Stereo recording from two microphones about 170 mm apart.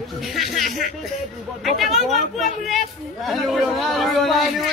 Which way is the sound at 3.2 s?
Centre (ahead or behind).